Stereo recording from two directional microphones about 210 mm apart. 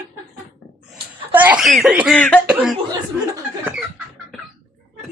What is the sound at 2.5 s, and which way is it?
Speech, 5° right (ahead or behind).